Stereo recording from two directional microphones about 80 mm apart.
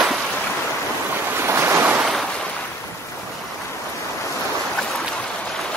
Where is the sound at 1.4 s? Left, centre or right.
Right.